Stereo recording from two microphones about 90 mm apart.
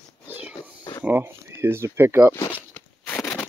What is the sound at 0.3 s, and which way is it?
Music, 15° right (ahead or behind).